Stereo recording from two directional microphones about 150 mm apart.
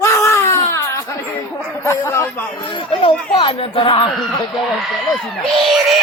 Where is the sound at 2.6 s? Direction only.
35° left (ahead or behind).